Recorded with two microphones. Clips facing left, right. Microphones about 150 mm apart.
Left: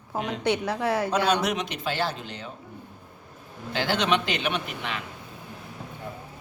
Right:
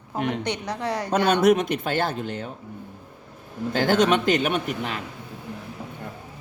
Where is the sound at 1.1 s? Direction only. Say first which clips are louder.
Right 6 dB; 55° right (ahead or behind).